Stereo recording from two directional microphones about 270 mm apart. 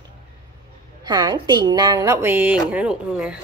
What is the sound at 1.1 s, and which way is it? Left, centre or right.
Speech, centre.